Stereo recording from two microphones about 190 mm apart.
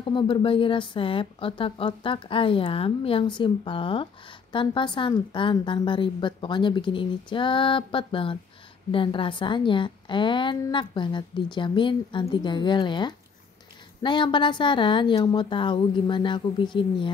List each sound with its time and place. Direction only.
0.0 s a woman's voice: 25° left (ahead or behind)